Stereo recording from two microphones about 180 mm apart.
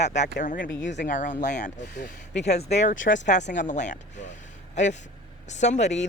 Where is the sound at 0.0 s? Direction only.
40° left (ahead or behind).